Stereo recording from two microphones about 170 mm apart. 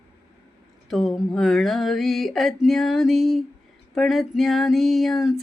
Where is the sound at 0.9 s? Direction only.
Centre (ahead or behind).